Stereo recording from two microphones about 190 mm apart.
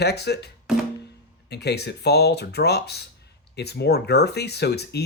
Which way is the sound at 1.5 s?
60° left (ahead or behind).